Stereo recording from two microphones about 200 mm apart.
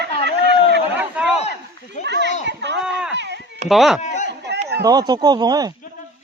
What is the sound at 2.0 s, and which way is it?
Children playing, 60° right (ahead or behind).